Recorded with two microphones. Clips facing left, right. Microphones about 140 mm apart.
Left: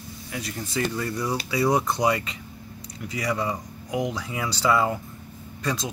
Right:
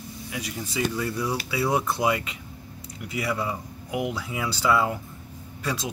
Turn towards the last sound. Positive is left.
turn(degrees=-5)  # may be behind; listen again after turning